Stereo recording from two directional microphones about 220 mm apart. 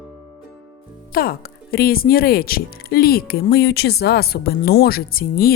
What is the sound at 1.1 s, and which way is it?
Speech, 40° left (ahead or behind).